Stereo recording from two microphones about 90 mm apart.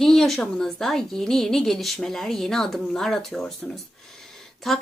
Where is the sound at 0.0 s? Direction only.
5° left (ahead or behind).